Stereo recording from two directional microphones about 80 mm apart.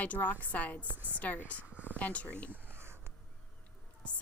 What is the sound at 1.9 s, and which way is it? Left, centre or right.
Speech, centre.